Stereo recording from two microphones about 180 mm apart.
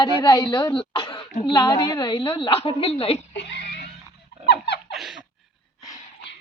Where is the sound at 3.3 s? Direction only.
70° left (ahead or behind).